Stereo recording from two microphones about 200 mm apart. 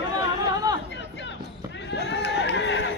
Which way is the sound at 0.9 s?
60° left (ahead or behind).